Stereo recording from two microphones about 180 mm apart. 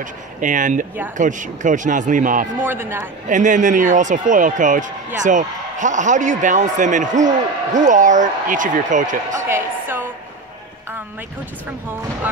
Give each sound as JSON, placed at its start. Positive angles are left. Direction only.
{"t": 0.0, "sound": "speech", "side_deg": -45}
{"t": 2.7, "sound": "a man's voice", "side_deg": -15}
{"t": 3.3, "sound": "speech", "side_deg": -45}
{"t": 9.5, "sound": "music", "side_deg": -10}